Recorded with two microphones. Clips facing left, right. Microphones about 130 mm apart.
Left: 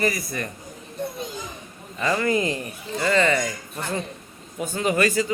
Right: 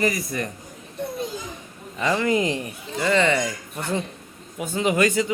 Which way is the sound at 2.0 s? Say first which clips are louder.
Right 1 dB; 15° right (ahead or behind).